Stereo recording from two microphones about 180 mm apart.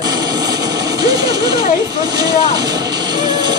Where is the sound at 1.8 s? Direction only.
20° right (ahead or behind).